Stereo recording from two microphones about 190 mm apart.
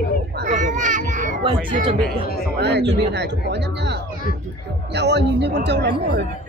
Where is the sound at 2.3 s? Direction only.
55° left (ahead or behind).